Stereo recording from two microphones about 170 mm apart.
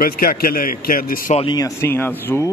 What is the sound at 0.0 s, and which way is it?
Speech, 55° left (ahead or behind).